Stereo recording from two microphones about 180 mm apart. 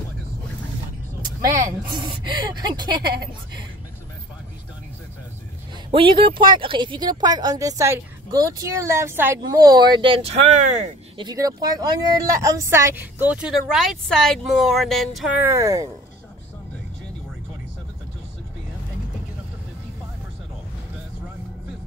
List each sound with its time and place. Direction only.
1.4 s speech: 15° right (ahead or behind)
5.9 s speech: 30° right (ahead or behind)
11.1 s speech: 20° right (ahead or behind); by 15.3 s centre (ahead or behind)
15.4 s speech: 15° right (ahead or behind)